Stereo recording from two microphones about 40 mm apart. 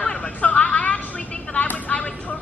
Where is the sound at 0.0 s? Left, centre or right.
Left.